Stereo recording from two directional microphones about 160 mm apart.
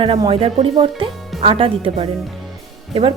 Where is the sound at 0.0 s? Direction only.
35° right (ahead or behind).